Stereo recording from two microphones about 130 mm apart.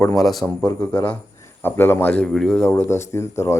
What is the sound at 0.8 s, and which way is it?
Speech, 10° left (ahead or behind).